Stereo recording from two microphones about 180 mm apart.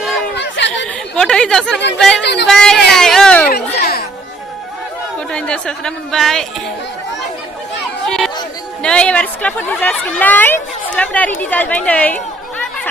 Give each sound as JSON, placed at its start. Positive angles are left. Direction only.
{"t": 0.3, "sound": "chatter", "side_deg": 80}
{"t": 1.1, "sound": "speech", "side_deg": 5}
{"t": 2.2, "sound": "speech", "side_deg": 70}
{"t": 2.5, "sound": "speech", "side_deg": 5}
{"t": 2.9, "sound": "a sound", "side_deg": 0}
{"t": 3.8, "sound": "children playing", "side_deg": 60}
{"t": 5.3, "sound": "speech", "side_deg": 5}
{"t": 8.0, "sound": "chatter", "side_deg": 0}
{"t": 8.8, "sound": "a woman's voice", "side_deg": 5}